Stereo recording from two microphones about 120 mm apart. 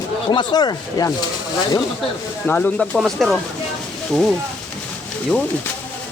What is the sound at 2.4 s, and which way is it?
Speech, 15° left (ahead or behind).